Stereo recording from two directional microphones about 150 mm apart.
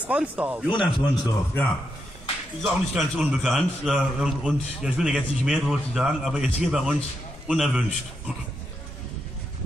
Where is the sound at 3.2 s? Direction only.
5° right (ahead or behind).